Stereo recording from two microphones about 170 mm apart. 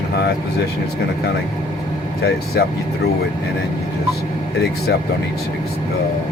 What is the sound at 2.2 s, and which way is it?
Speech, 70° left (ahead or behind).